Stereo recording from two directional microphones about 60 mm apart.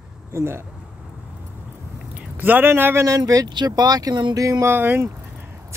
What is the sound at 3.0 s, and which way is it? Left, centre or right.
Speech, right.